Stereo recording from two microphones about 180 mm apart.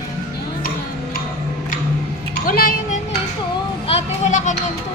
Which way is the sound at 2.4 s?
50° left (ahead or behind).